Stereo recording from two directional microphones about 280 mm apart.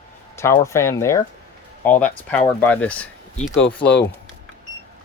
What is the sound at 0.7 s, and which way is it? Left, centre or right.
Speech, centre.